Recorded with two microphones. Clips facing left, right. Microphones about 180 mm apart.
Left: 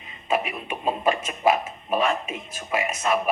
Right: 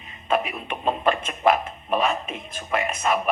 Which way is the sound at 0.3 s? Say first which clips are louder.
Right 1 dB; 10° left (ahead or behind).